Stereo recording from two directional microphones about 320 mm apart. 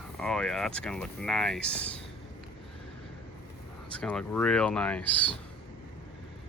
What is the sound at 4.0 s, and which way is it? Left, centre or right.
Speech, centre.